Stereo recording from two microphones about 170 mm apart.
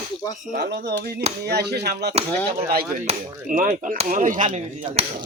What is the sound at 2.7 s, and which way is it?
Speech, 60° right (ahead or behind).